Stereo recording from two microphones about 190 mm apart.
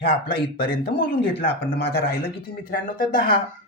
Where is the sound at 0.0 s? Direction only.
55° left (ahead or behind).